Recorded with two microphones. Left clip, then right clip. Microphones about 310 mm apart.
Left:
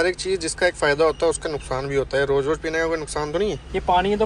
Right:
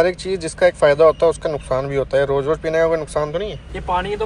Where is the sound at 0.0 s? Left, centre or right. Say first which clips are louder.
Right 4 dB; centre.